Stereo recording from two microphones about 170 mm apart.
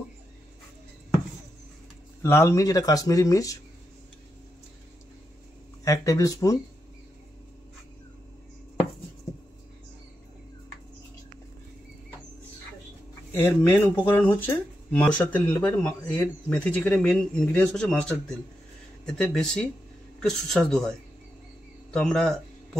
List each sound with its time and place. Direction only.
2.2 s speech: 15° left (ahead or behind)
5.9 s speech: 20° left (ahead or behind)
13.3 s speech: 10° left (ahead or behind)
21.9 s speech: centre (ahead or behind)